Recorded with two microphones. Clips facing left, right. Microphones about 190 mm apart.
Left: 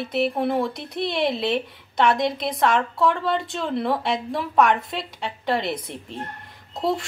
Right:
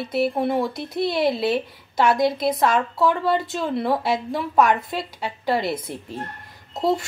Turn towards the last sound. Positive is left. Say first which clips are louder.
# right 2 dB
turn(degrees=0)  # may be behind; listen again after turning